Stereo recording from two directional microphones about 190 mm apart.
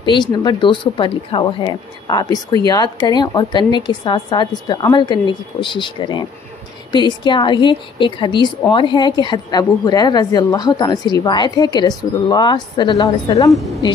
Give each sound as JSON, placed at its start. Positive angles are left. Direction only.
{"t": 0.1, "sound": "speech", "side_deg": 20}